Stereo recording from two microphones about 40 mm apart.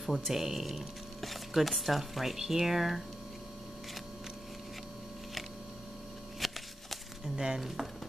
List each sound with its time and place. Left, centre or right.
0.0 s speech: centre
6.4 s a sound: centre
7.3 s speech: centre
7.6 s speech: centre